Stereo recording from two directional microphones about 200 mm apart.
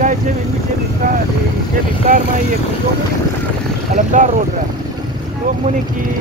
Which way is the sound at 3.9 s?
40° right (ahead or behind).